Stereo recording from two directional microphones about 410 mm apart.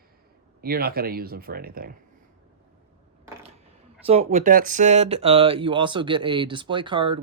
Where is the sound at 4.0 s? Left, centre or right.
Centre.